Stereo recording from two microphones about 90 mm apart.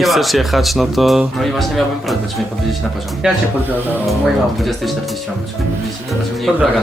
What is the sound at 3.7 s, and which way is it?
Speech, 20° right (ahead or behind).